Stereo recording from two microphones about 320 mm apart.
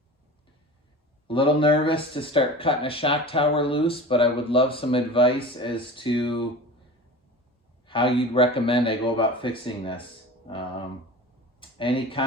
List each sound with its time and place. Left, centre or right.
1.3 s speech: centre
7.9 s speech: centre
11.6 s speech: centre